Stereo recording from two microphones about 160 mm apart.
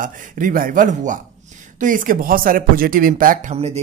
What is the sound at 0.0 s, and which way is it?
A man's voice, 55° right (ahead or behind).